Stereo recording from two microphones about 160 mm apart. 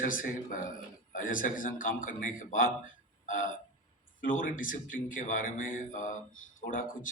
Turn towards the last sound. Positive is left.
turn(degrees=55)  # may be behind; listen again after turning